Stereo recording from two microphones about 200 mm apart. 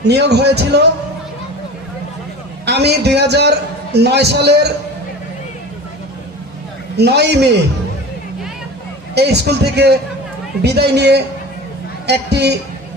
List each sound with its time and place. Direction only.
0.0 s a man's voice: 55° right (ahead or behind)
2.6 s a man's voice: 55° right (ahead or behind)
6.9 s a man's voice: 55° right (ahead or behind)
9.1 s a man's voice: 55° right (ahead or behind)